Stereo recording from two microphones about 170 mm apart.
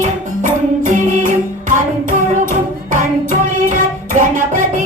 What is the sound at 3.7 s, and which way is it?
Music, 50° right (ahead or behind).